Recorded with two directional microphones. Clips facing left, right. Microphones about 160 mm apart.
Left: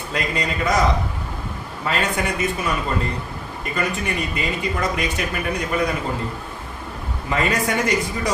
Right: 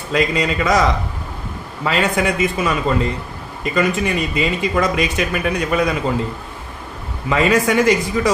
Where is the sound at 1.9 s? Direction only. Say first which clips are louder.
Right 5 dB; 90° right.